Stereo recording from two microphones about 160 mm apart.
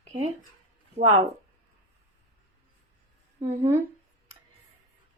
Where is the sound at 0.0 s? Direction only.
45° right (ahead or behind).